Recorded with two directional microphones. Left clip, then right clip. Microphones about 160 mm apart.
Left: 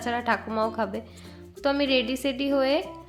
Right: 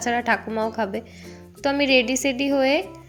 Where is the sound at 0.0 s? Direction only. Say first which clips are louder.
Right 4 dB; 15° right (ahead or behind).